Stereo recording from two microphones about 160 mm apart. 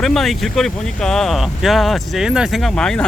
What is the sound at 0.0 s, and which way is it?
Speech, centre (ahead or behind).